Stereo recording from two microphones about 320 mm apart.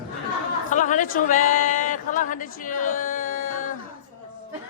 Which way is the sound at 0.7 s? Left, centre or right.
Left.